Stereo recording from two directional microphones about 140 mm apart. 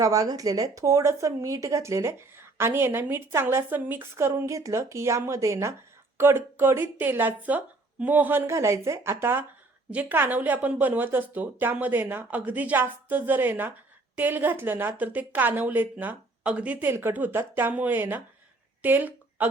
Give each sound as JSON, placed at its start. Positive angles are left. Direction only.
{"t": 0.0, "sound": "a woman's voice", "side_deg": -25}